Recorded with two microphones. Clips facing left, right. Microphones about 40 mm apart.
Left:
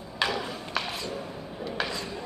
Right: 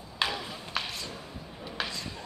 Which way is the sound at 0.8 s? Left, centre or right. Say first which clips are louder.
Left 3 dB; centre.